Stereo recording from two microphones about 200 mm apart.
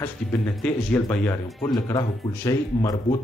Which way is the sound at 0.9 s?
10° left (ahead or behind).